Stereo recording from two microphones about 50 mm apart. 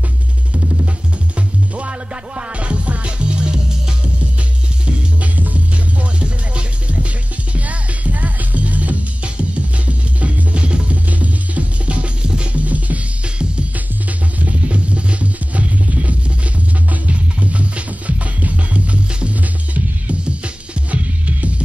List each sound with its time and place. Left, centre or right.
1.8 s music: right
4.8 s music: right